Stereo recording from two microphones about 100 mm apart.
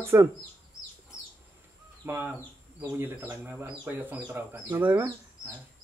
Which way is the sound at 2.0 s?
25° right (ahead or behind).